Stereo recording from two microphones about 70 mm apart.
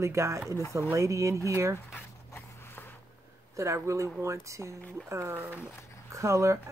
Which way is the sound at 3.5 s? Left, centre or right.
Right.